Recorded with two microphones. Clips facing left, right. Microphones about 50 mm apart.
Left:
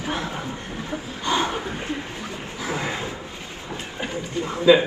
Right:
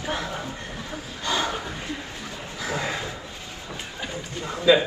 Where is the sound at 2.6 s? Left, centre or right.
Left.